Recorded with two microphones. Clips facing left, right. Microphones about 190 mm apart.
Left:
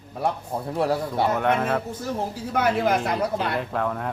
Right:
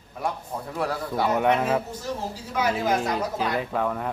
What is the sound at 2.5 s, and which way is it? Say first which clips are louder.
Speech: left 2 dB; 55° left (ahead or behind).